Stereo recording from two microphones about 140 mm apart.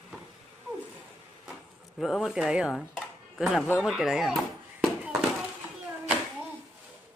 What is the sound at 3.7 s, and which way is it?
Speech, centre (ahead or behind).